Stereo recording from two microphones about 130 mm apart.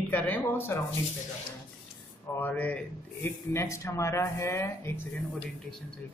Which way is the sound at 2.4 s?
10° left (ahead or behind).